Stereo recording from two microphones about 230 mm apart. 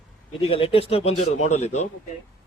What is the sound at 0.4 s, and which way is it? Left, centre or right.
A man's voice, left.